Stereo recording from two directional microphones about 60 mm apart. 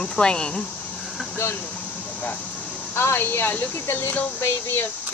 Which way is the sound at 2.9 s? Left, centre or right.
Left.